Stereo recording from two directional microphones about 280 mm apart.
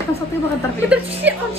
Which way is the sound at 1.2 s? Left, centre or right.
Centre.